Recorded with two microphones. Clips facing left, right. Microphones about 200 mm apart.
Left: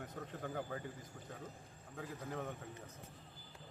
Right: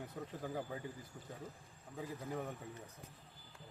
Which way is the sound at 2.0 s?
10° right (ahead or behind).